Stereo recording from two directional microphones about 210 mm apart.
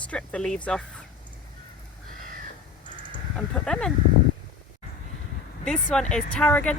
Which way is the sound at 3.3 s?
5° left (ahead or behind).